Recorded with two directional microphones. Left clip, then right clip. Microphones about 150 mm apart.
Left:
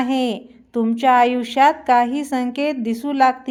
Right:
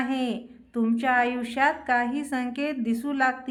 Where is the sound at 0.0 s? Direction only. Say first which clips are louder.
Left 8 dB; 40° left (ahead or behind).